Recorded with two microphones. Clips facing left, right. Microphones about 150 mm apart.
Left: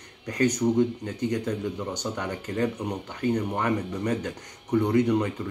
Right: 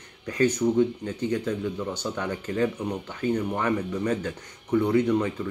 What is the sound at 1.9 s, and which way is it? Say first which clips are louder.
Speech: right 1 dB; 15° left (ahead or behind).